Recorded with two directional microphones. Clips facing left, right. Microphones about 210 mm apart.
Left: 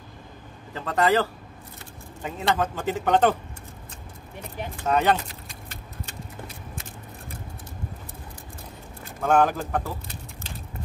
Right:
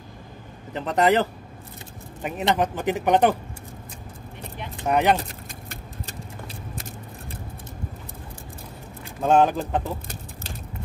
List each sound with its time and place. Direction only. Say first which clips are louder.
0.7 s speech: right 2 dB; 20° right (ahead or behind)
4.7 s speech: right 2 dB; 15° right (ahead or behind)
5.7 s vehicle: right 1 dB; 40° right (ahead or behind)
9.2 s speech: right 2 dB; 20° right (ahead or behind)